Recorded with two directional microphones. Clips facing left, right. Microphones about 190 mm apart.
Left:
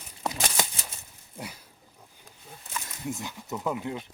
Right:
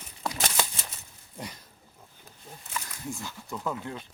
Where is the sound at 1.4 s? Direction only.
10° left (ahead or behind).